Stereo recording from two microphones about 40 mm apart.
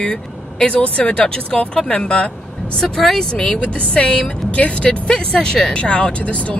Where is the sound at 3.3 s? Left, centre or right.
Left.